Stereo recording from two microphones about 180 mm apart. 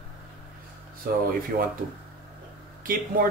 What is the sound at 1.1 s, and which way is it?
Speech, 55° right (ahead or behind).